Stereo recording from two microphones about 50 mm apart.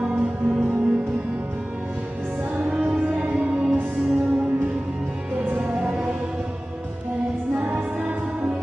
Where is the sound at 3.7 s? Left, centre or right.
Right.